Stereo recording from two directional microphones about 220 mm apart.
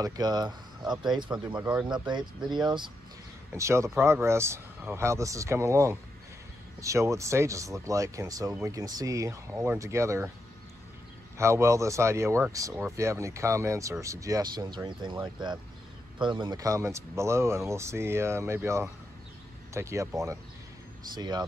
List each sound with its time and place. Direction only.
0.0 s speech: 15° right (ahead or behind)
11.3 s speech: 10° right (ahead or behind)